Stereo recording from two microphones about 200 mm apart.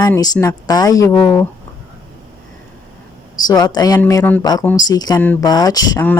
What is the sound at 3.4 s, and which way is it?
Speech, 20° left (ahead or behind).